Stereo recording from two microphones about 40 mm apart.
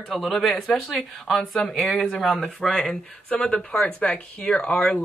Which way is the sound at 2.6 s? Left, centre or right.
Left.